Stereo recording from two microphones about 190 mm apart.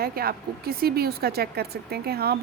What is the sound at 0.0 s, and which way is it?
A woman's voice, 55° right (ahead or behind).